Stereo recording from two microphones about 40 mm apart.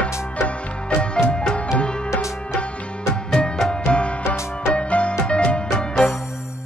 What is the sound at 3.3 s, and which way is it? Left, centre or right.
Music, centre.